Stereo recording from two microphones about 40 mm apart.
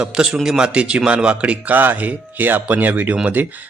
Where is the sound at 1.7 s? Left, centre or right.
Right.